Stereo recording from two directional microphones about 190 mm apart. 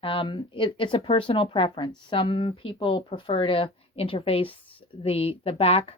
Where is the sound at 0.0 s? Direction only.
25° left (ahead or behind).